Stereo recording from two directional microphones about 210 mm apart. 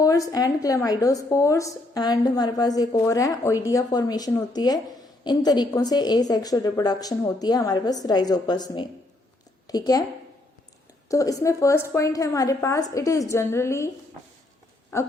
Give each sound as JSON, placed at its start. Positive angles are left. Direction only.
{"t": 0.0, "sound": "a woman's voice", "side_deg": 15}
{"t": 11.1, "sound": "a woman's voice", "side_deg": 15}
{"t": 14.9, "sound": "a woman's voice", "side_deg": 15}